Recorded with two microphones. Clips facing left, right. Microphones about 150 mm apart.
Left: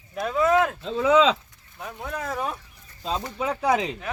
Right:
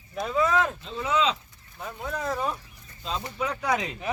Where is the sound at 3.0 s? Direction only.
45° left (ahead or behind).